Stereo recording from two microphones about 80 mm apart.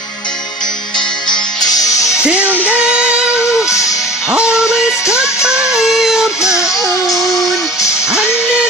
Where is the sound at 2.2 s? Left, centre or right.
Centre.